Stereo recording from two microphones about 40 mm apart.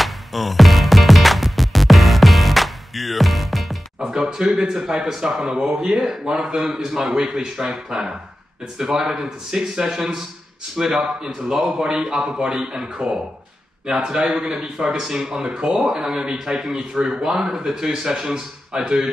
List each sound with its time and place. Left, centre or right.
0.0 s music: centre
4.1 s a man's voice: centre